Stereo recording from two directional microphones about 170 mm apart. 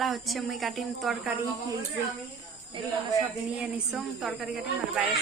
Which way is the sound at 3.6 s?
5° right (ahead or behind).